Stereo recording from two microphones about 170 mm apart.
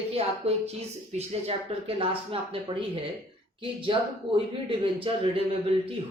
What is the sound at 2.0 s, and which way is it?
Speech, 30° right (ahead or behind).